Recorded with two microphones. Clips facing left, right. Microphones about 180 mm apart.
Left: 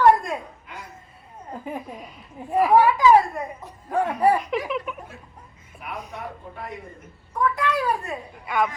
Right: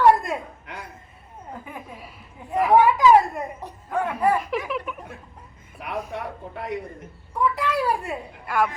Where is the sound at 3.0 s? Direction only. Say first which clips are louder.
Even; centre (ahead or behind).